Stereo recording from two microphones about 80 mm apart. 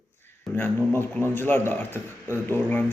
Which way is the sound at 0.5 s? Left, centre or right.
Left.